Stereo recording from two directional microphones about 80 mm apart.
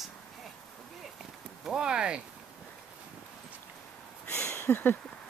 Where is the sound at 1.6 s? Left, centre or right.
Centre.